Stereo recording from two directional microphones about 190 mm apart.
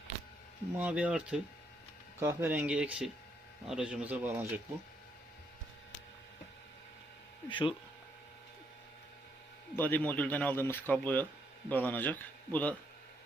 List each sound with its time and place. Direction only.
0.8 s speech: 5° right (ahead or behind)
7.5 s speech: 25° left (ahead or behind)
9.7 s speech: 10° left (ahead or behind)